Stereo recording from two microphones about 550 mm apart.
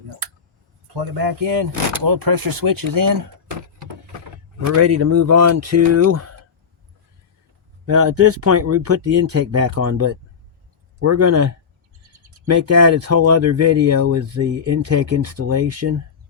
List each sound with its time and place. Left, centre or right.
0.9 s speech: right
4.7 s speech: right
7.9 s speech: right
12.5 s speech: right